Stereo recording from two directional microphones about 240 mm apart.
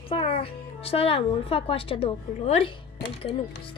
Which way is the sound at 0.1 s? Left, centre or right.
Left.